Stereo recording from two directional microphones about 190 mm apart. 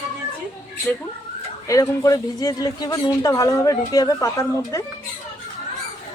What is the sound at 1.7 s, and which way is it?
A man's voice, 15° left (ahead or behind).